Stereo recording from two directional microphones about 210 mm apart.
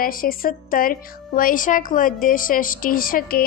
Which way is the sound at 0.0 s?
45° left (ahead or behind).